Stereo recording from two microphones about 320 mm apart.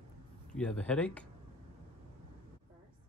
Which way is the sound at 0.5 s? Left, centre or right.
Centre.